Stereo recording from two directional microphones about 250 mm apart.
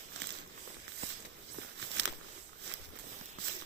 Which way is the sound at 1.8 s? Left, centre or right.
Right.